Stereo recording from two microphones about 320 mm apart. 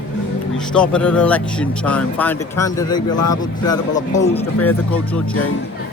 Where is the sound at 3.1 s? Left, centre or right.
Left.